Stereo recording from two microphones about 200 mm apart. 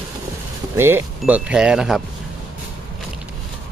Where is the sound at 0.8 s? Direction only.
10° right (ahead or behind).